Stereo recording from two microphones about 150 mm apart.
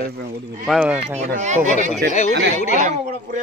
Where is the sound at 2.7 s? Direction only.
55° right (ahead or behind).